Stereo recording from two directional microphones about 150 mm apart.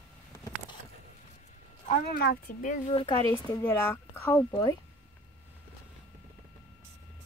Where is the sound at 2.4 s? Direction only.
60° left (ahead or behind).